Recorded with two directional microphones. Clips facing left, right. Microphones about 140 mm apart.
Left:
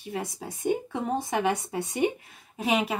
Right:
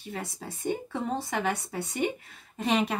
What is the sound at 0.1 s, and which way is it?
Speech, 15° left (ahead or behind).